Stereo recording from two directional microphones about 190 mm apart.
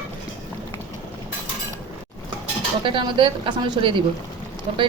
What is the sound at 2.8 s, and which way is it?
A woman's voice, 25° right (ahead or behind).